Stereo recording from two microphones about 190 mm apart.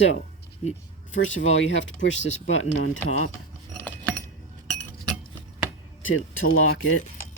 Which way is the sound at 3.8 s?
10° left (ahead or behind).